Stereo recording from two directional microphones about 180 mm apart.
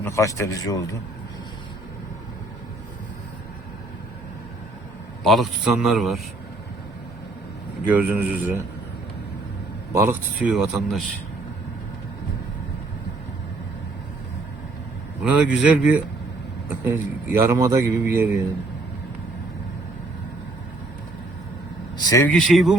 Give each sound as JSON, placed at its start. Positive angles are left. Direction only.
{"t": 0.0, "sound": "a man's voice", "side_deg": 15}
{"t": 5.2, "sound": "a man's voice", "side_deg": 0}
{"t": 7.9, "sound": "a man's voice", "side_deg": -10}
{"t": 9.9, "sound": "a man's voice", "side_deg": -15}
{"t": 10.4, "sound": "a man's voice", "side_deg": 0}
{"t": 15.2, "sound": "a man's voice", "side_deg": -10}
{"t": 21.9, "sound": "speech", "side_deg": 20}
{"t": 22.3, "sound": "a man's voice", "side_deg": 5}